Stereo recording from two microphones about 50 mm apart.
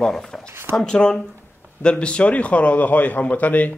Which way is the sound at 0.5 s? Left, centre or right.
Right.